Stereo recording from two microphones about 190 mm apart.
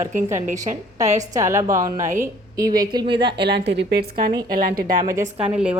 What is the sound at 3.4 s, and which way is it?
Speech, 60° right (ahead or behind).